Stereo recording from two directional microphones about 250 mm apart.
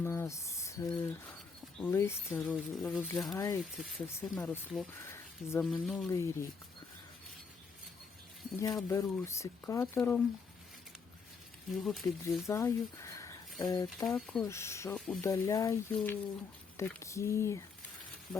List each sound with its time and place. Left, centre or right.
0.0 s speech: centre
4.0 s speech: centre
8.5 s speech: centre
11.8 s speech: centre
12.5 s speech: centre